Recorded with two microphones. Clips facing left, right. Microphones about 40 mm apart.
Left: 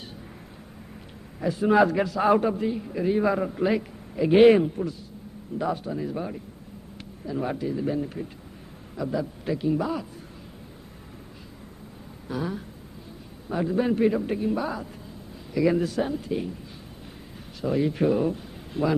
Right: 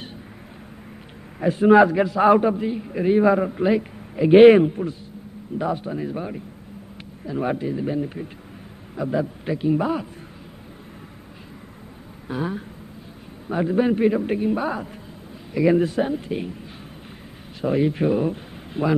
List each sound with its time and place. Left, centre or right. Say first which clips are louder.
1.4 s a man's voice: right 7 dB; right
1.8 s a man's voice: right 5 dB; centre; by 10.0 s right
12.3 s a man's voice: right 3 dB; right
17.6 s a man's voice: right 3 dB; right
18.3 s a sound: right 2 dB; right